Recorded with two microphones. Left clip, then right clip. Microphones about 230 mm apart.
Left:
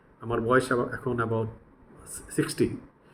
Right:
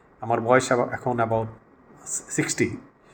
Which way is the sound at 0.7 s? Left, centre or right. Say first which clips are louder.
Right 5 dB; right.